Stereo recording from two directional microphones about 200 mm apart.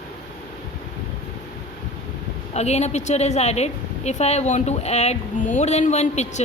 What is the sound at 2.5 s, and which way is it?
A woman's voice, 35° left (ahead or behind).